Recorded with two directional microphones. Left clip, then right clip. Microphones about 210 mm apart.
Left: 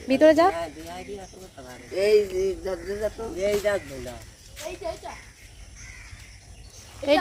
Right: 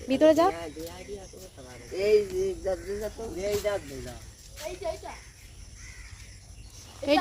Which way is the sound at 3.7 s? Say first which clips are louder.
Left 4 dB; 55° left (ahead or behind).